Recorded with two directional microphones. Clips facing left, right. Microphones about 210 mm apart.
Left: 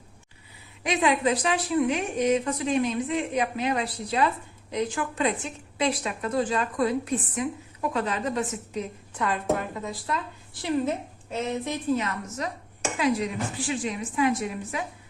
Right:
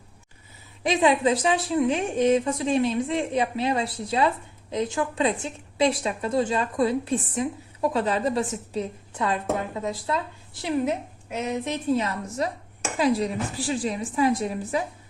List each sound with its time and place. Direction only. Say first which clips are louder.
0.9 s a woman's voice: right 3 dB; 30° right (ahead or behind)
11.3 s speech: right 1 dB; 10° right (ahead or behind)
11.7 s a woman's voice: right 4 dB; 30° right (ahead or behind)